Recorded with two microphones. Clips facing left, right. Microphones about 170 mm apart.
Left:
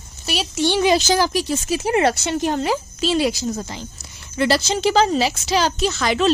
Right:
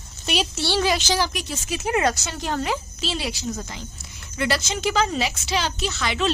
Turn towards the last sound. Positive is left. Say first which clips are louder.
# left 6 dB
turn(degrees=40)  # may be behind; listen again after turning